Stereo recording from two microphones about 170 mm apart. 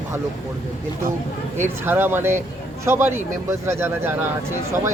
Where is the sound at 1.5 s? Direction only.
10° right (ahead or behind).